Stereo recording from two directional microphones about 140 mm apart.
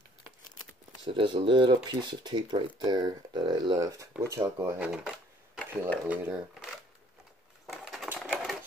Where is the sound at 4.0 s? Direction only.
20° right (ahead or behind).